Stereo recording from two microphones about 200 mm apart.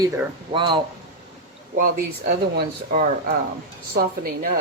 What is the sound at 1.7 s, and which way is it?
Speech, 45° right (ahead or behind).